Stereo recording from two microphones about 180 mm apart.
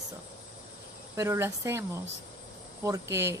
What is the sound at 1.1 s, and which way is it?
Speech, 15° right (ahead or behind).